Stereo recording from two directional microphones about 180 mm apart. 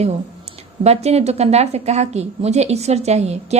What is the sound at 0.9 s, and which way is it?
A woman's voice, 35° right (ahead or behind).